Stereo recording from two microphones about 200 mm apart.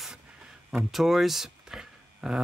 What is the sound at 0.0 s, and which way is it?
Speech, 5° right (ahead or behind).